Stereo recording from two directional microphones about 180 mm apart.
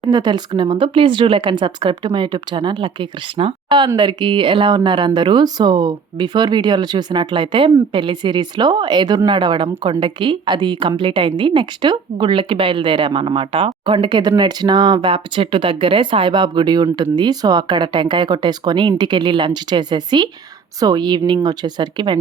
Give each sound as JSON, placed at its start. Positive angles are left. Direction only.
{"t": 0.1, "sound": "speech", "side_deg": -25}